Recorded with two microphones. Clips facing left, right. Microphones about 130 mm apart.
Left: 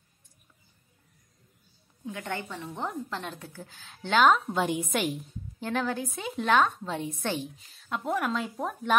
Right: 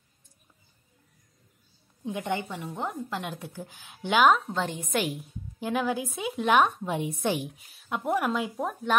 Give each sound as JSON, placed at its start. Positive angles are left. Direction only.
{"t": 2.0, "sound": "a woman's voice", "side_deg": -20}
{"t": 2.7, "sound": "a woman's voice", "side_deg": -5}
{"t": 4.5, "sound": "a woman's voice", "side_deg": 10}
{"t": 4.9, "sound": "a woman's voice", "side_deg": 0}